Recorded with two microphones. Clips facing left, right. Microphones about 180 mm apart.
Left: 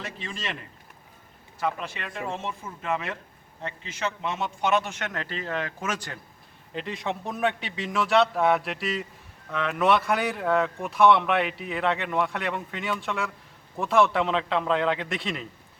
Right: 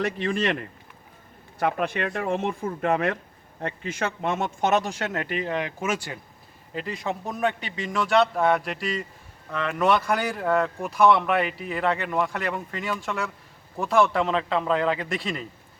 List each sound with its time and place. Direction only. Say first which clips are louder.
0.0 s speech: right 11 dB; 60° right (ahead or behind)
1.5 s speech: right 5 dB; 60° right (ahead or behind); by 15.4 s centre (ahead or behind)